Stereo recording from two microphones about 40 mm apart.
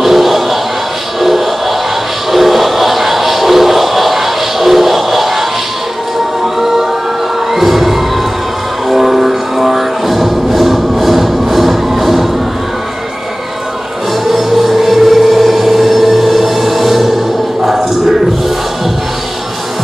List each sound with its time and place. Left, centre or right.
0.0 s music: centre
6.4 s music: centre
14.2 s music: centre